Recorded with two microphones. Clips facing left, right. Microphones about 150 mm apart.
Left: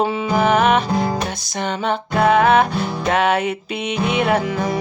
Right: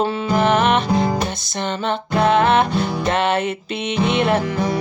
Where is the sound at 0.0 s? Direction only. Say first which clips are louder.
Even; 10° left (ahead or behind).